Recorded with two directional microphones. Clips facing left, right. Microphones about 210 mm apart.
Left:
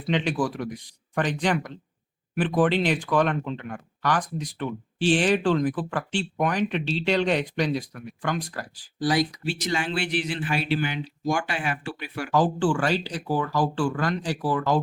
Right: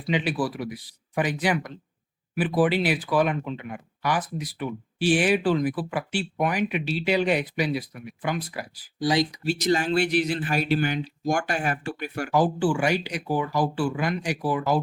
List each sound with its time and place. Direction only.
0.1 s speech: 5° right (ahead or behind)
9.4 s speech: 40° right (ahead or behind)
12.3 s speech: 10° right (ahead or behind)